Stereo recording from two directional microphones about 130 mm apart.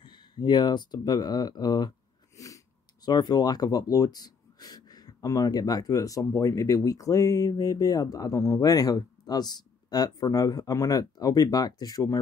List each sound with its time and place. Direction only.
0.0 s speech: 35° left (ahead or behind)